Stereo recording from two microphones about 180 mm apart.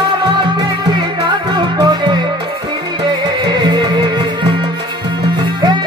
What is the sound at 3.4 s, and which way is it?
Music, 25° right (ahead or behind).